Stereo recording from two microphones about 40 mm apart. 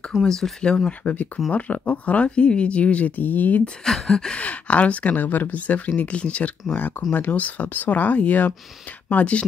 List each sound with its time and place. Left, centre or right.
0.2 s a sound: centre
0.7 s speech: left
1.0 s speech: left
3.2 s speech: left
3.8 s a sound: centre
4.4 s speech: left
6.7 s speech: left